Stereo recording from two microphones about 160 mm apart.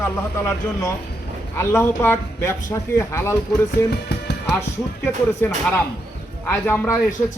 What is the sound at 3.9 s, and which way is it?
Music, 90° left.